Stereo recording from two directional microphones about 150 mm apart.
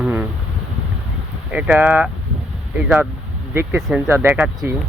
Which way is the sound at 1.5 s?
10° right (ahead or behind).